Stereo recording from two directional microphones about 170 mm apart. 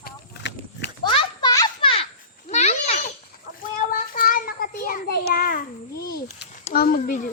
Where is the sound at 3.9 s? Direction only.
55° left (ahead or behind).